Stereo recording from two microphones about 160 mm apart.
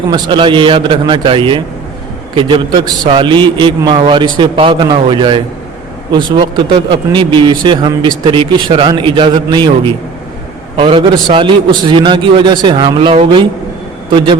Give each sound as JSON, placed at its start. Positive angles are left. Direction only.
{"t": 0.1, "sound": "a man's voice", "side_deg": -30}